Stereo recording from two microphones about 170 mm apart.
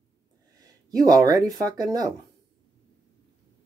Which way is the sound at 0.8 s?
20° right (ahead or behind).